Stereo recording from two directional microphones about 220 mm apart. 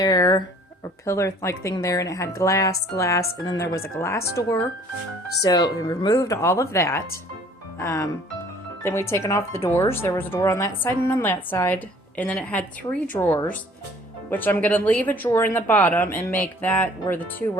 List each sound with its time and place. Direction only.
0.0 s speech: 20° left (ahead or behind)